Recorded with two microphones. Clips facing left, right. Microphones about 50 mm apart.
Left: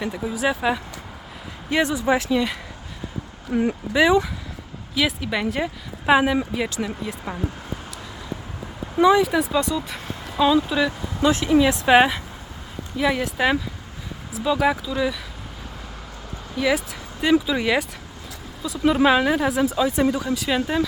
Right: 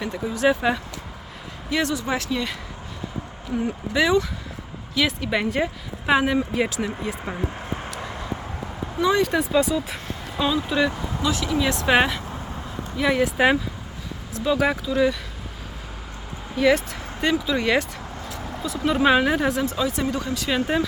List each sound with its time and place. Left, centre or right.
0.0 s speech: centre
1.7 s speech: centre
3.5 s speech: left
3.9 s speech: centre
4.9 s speech: centre
9.0 s speech: centre
11.2 s speech: left
11.6 s speech: centre
13.0 s speech: centre
16.6 s speech: centre
19.9 s speech: centre